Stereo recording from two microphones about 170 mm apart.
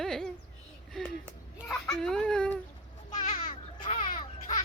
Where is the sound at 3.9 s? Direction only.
30° left (ahead or behind).